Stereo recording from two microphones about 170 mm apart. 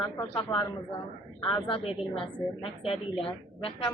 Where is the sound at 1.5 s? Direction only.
30° left (ahead or behind).